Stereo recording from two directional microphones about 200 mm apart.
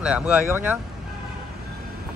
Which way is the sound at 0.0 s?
5° right (ahead or behind).